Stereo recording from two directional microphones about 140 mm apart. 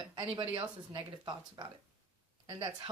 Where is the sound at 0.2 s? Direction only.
40° right (ahead or behind).